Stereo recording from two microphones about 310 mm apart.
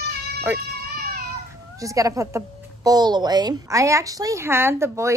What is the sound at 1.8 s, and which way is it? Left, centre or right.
A woman's voice, centre.